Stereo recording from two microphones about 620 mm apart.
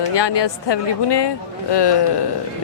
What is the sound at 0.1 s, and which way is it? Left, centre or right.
A woman's voice, left.